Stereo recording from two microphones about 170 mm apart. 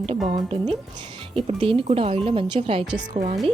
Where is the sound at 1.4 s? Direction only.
35° right (ahead or behind).